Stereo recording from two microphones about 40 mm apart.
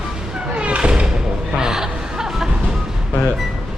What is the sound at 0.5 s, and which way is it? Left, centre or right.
Thump, right.